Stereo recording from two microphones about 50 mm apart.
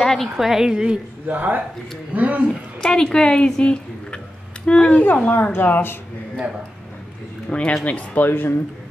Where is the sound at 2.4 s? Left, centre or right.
Centre.